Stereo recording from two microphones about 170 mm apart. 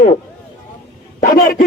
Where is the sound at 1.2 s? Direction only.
55° left (ahead or behind).